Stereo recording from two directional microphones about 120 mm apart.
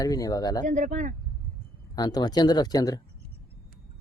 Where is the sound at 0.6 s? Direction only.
90° right.